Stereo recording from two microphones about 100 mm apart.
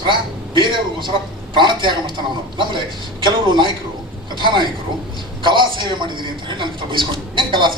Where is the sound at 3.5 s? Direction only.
50° right (ahead or behind).